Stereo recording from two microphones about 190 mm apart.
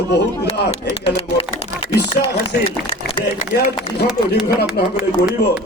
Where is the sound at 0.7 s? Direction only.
30° left (ahead or behind).